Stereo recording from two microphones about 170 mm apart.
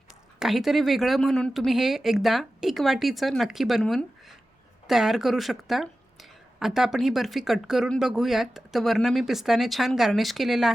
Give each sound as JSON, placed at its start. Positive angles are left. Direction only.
{"t": 0.3, "sound": "speech", "side_deg": 0}